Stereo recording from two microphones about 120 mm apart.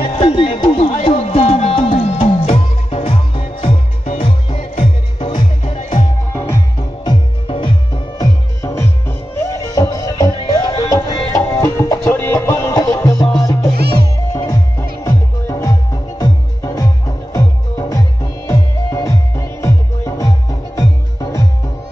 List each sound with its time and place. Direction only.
0.0 s music: 45° left (ahead or behind)
5.8 s music: 90° left
6.3 s music: 20° left (ahead or behind)
7.1 s music: 40° left (ahead or behind)
8.2 s music: 25° left (ahead or behind)